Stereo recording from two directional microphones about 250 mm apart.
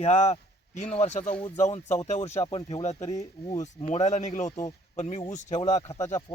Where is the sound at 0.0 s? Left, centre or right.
Left.